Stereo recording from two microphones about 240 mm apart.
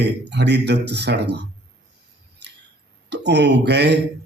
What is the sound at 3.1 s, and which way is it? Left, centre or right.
Speech, right.